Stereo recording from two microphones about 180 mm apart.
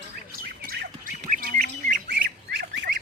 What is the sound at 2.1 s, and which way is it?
Fowl, 70° right (ahead or behind).